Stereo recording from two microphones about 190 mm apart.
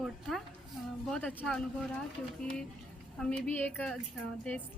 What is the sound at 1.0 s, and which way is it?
Speech, 5° left (ahead or behind).